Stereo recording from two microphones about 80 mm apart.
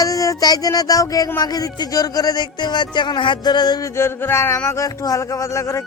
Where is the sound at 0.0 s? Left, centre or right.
Left.